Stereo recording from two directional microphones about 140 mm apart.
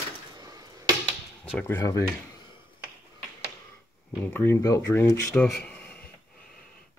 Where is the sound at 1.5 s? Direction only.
15° left (ahead or behind).